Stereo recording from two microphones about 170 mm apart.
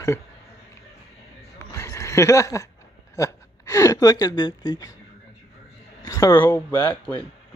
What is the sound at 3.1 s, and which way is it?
Speech, 15° left (ahead or behind).